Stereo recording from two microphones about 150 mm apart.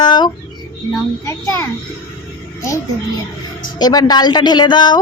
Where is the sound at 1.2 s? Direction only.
20° left (ahead or behind).